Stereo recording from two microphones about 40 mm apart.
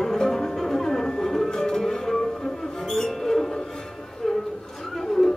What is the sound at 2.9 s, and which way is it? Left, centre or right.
Music, centre.